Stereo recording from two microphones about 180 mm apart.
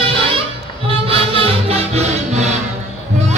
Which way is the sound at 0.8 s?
30° right (ahead or behind).